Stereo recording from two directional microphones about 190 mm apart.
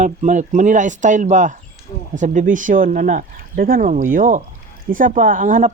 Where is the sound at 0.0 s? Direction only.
40° right (ahead or behind).